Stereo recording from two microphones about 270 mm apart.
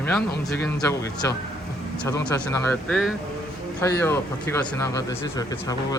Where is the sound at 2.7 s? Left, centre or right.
Centre.